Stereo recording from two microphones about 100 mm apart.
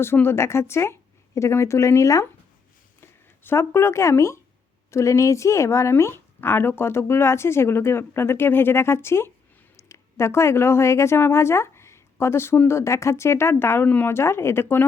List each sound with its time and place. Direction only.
0.0 s a woman's voice: 25° left (ahead or behind)